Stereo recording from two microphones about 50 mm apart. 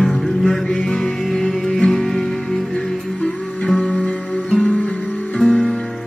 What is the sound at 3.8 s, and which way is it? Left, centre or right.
Music, centre.